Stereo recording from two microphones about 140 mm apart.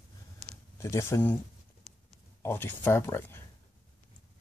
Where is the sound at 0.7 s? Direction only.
20° left (ahead or behind).